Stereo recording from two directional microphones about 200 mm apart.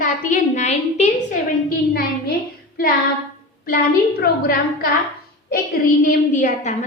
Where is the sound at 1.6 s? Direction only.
50° left (ahead or behind).